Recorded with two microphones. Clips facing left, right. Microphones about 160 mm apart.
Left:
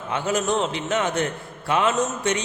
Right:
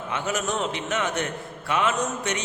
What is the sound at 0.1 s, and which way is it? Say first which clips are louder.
A man's voice: left 5 dB; 30° left (ahead or behind).